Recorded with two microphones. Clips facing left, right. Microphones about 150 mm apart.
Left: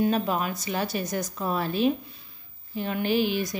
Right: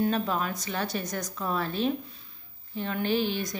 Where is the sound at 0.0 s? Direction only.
15° left (ahead or behind).